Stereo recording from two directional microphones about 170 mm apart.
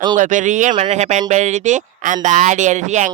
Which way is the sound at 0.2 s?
45° right (ahead or behind).